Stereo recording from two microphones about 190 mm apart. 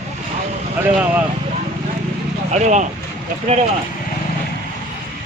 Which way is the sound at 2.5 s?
40° right (ahead or behind).